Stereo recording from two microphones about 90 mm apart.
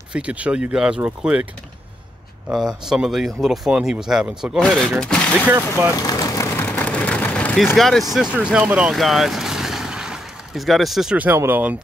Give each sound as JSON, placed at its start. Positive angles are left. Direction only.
{"t": 0.1, "sound": "speech", "side_deg": -15}
{"t": 2.5, "sound": "speech", "side_deg": -5}
{"t": 4.7, "sound": "speech", "side_deg": 5}
{"t": 6.0, "sound": "vehicle", "side_deg": 40}
{"t": 6.6, "sound": "a sound", "side_deg": 15}
{"t": 7.7, "sound": "speech", "side_deg": 5}
{"t": 8.1, "sound": "speech", "side_deg": -10}
{"t": 8.9, "sound": "vehicle", "side_deg": 0}
{"t": 11.1, "sound": "speech", "side_deg": -25}